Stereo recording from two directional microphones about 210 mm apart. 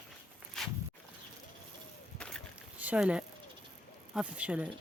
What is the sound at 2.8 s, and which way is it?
Speech, 5° right (ahead or behind).